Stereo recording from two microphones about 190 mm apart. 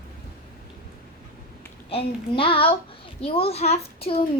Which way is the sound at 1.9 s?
30° left (ahead or behind).